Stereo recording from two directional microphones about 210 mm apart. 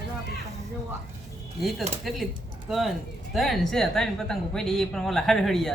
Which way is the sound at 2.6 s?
Centre (ahead or behind).